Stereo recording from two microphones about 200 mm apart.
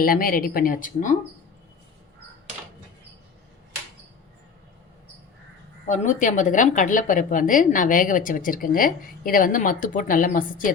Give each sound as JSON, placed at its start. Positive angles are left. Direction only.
{"t": 0.0, "sound": "speech", "side_deg": 45}
{"t": 5.8, "sound": "a woman's voice", "side_deg": 35}